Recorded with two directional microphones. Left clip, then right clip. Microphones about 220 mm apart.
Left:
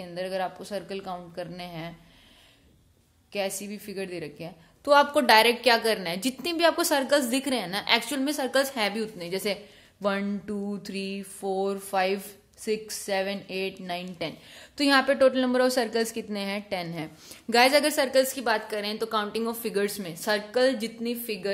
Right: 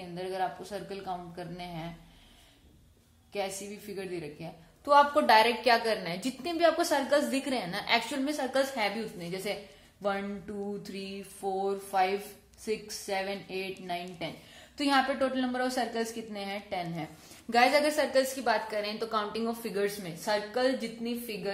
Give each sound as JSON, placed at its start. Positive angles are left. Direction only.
{"t": 0.1, "sound": "a woman's voice", "side_deg": 50}
{"t": 3.3, "sound": "a woman's voice", "side_deg": 50}